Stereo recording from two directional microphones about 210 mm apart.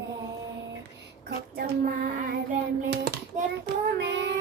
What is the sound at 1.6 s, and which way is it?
Child singing, 45° right (ahead or behind).